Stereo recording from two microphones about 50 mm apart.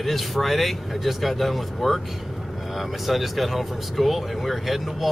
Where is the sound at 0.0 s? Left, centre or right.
Centre.